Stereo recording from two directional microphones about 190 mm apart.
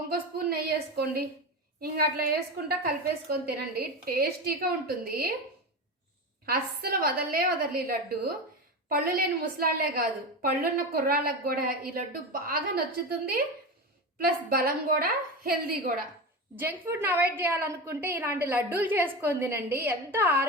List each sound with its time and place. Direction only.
0.1 s a sound: 55° right (ahead or behind)
1.8 s a woman's voice: 55° right (ahead or behind)
6.4 s a woman's voice: 55° right (ahead or behind)
14.3 s a woman's voice: 50° right (ahead or behind)
16.6 s a woman's voice: 10° right (ahead or behind)